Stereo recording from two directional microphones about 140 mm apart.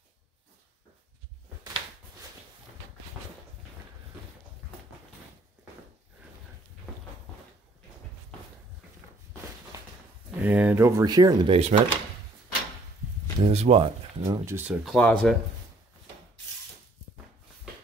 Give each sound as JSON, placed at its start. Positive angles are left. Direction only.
{"t": 10.3, "sound": "speech", "side_deg": -10}
{"t": 11.5, "sound": "speech", "side_deg": -45}
{"t": 13.4, "sound": "speech", "side_deg": -45}
{"t": 14.2, "sound": "speech", "side_deg": -20}
{"t": 14.9, "sound": "speech", "side_deg": 5}